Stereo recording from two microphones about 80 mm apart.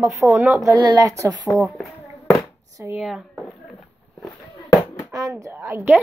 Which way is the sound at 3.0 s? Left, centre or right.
Centre.